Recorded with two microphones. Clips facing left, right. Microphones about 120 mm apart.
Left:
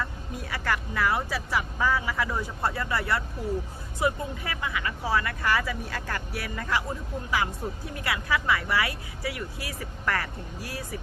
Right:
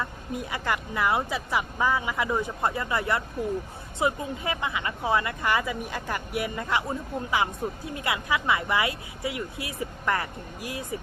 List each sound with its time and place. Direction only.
0.0 s speech: 20° right (ahead or behind)